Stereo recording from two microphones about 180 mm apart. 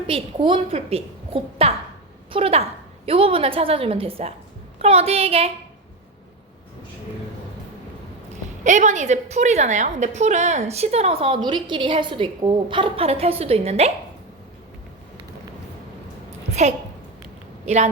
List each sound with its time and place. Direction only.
0.1 s a woman's voice: 30° right (ahead or behind)
8.6 s a woman's voice: 40° right (ahead or behind)